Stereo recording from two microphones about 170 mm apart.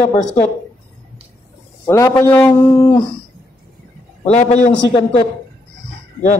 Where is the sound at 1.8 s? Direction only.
15° left (ahead or behind).